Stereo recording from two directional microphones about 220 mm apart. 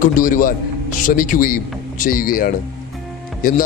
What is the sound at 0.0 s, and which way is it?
A man's voice, 35° left (ahead or behind).